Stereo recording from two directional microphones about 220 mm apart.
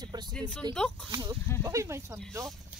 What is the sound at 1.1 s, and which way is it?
Speech, 15° right (ahead or behind).